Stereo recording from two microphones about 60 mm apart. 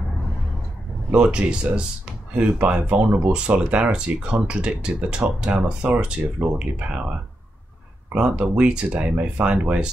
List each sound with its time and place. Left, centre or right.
1.1 s speech: centre
8.1 s speech: right